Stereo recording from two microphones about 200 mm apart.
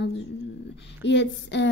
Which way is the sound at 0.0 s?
65° left (ahead or behind).